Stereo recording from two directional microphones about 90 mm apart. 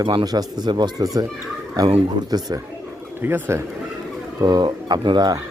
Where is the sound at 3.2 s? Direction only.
25° right (ahead or behind).